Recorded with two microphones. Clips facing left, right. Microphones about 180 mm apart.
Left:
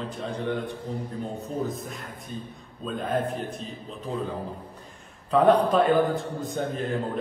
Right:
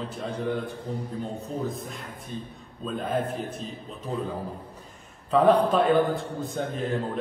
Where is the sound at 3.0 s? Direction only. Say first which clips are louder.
Left 1 dB; centre (ahead or behind).